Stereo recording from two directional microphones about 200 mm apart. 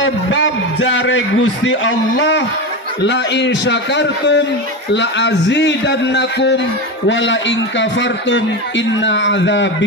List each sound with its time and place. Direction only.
0.3 s a man's voice: 70° left (ahead or behind)